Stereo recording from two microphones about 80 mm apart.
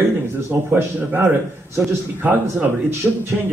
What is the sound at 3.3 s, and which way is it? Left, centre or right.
Music, centre.